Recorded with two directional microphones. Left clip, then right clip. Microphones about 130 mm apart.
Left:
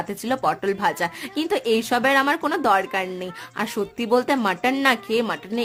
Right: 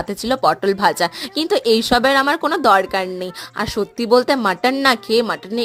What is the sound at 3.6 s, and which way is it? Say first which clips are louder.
A woman's voice: right 5 dB; 30° right (ahead or behind).